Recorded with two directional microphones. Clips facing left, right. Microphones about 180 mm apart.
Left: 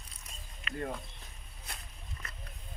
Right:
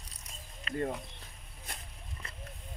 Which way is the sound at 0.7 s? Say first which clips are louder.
Right 4 dB; 35° right (ahead or behind).